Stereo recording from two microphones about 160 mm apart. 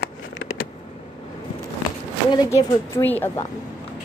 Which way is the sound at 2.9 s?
10° left (ahead or behind).